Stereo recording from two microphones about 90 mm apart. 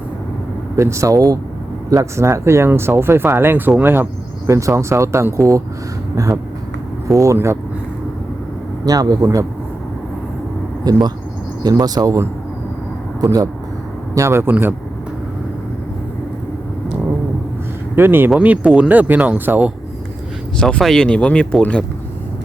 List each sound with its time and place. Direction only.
0.8 s speech: 35° right (ahead or behind)
4.4 s speech: 35° right (ahead or behind)
8.8 s speech: 45° right (ahead or behind)
10.9 s speech: 50° right (ahead or behind)
13.2 s speech: 40° right (ahead or behind)
14.2 s speech: 30° right (ahead or behind)
14.5 s speech: 15° right (ahead or behind)
17.9 s speech: 25° right (ahead or behind)
20.6 s speech: 10° left (ahead or behind)